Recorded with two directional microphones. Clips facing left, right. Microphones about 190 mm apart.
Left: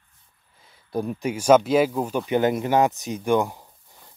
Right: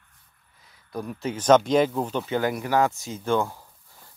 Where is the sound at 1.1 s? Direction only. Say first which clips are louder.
Left 1 dB; 10° left (ahead or behind).